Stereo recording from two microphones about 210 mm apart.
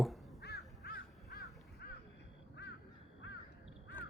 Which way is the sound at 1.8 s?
50° left (ahead or behind).